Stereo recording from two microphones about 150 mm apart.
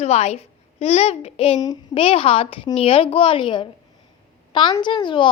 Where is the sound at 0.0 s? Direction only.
45° left (ahead or behind).